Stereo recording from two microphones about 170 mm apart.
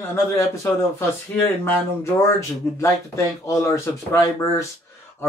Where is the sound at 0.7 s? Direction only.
15° left (ahead or behind).